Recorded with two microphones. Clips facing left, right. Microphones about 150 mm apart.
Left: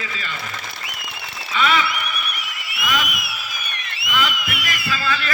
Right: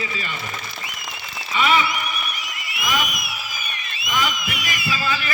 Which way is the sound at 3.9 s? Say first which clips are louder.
Left 1 dB; 65° left (ahead or behind).